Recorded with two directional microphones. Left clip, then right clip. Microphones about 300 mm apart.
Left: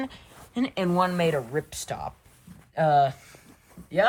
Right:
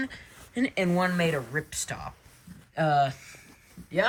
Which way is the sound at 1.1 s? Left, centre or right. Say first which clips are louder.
Left 3 dB; centre.